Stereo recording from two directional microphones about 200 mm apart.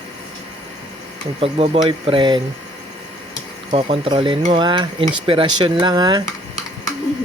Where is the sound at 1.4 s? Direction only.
30° right (ahead or behind).